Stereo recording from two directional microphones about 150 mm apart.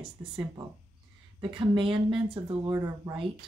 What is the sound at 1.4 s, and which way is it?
Speech, 35° right (ahead or behind).